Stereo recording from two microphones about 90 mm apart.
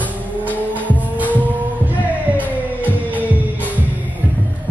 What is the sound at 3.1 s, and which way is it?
Music, 20° right (ahead or behind).